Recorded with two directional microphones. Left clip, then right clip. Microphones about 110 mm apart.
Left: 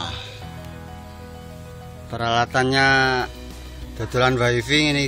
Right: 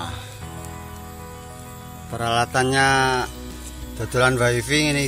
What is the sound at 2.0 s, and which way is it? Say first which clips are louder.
Speech: left 1 dB; 10° left (ahead or behind).